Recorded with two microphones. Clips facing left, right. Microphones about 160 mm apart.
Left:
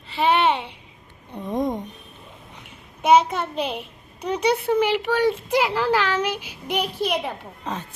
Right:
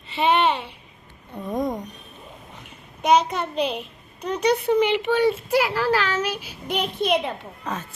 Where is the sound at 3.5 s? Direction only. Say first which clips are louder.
Right 4 dB; 55° left (ahead or behind).